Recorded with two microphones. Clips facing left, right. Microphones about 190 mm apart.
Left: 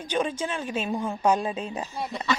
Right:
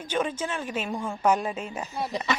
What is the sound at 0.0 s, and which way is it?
Speech, 15° left (ahead or behind).